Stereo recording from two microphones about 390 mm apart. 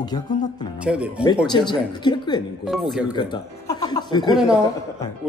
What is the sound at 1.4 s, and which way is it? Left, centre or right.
Speech, centre.